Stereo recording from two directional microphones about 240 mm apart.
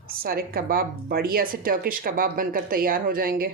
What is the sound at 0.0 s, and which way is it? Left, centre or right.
Speech, right.